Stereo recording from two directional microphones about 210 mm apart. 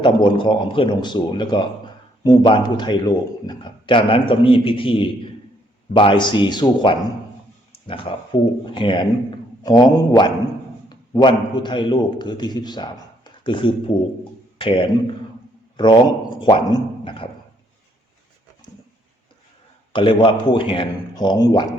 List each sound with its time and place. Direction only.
0.0 s a man's voice: 20° left (ahead or behind)
16.4 s a man's voice: 25° left (ahead or behind)
19.9 s a man's voice: 25° left (ahead or behind)